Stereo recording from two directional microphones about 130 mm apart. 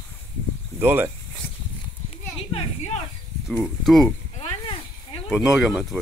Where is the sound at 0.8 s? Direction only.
15° right (ahead or behind).